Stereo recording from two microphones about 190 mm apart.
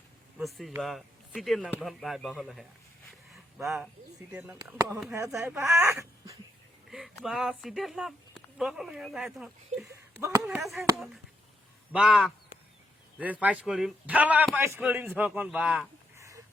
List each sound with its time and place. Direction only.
0.3 s speech: centre (ahead or behind)
3.3 s a sound: centre (ahead or behind)
4.3 s a man's voice: 10° right (ahead or behind)
4.5 s a man's voice: 20° right (ahead or behind)
6.9 s speech: centre (ahead or behind)
9.9 s speech: 15° right (ahead or behind)
10.4 s a man's voice: centre (ahead or behind)